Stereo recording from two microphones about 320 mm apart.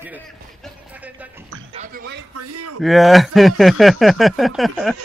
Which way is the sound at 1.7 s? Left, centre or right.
Right.